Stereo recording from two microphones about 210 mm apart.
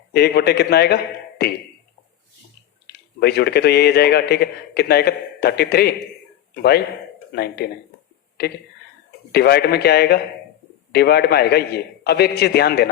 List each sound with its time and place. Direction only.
0.1 s speech: 50° left (ahead or behind)
2.8 s speech: 50° left (ahead or behind)
9.3 s speech: 50° left (ahead or behind)